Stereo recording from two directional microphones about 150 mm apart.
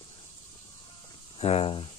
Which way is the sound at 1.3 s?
40° left (ahead or behind).